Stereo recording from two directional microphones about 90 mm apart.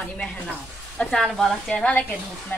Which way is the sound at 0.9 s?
5° left (ahead or behind).